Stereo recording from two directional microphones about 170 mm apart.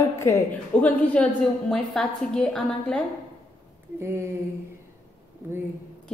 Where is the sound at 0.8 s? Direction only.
5° left (ahead or behind).